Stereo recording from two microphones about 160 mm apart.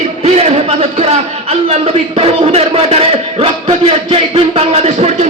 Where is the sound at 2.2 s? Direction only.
40° right (ahead or behind).